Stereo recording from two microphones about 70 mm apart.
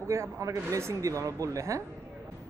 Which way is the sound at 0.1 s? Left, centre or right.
Right.